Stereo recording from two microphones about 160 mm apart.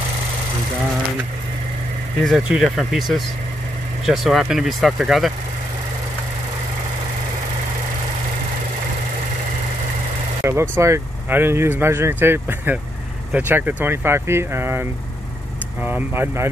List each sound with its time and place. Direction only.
2.2 s speech: 5° right (ahead or behind)
10.4 s speech: 15° right (ahead or behind)